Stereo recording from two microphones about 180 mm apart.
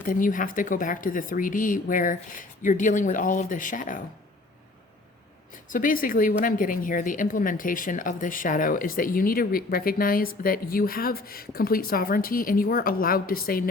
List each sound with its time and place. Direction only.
0.0 s a woman's voice: 50° left (ahead or behind)
5.7 s a woman's voice: 50° left (ahead or behind)